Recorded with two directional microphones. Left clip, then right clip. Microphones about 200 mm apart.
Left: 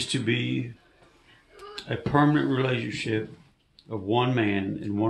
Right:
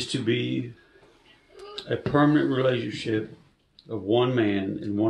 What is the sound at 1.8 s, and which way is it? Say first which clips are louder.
Speech: right 1 dB; 20° left (ahead or behind).